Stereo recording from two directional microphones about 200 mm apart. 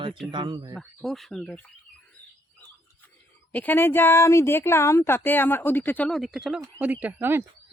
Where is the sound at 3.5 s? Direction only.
10° left (ahead or behind).